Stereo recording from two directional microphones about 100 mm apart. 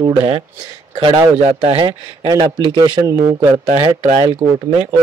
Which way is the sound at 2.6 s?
50° right (ahead or behind).